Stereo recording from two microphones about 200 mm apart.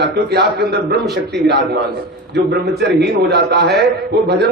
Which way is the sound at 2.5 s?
55° right (ahead or behind).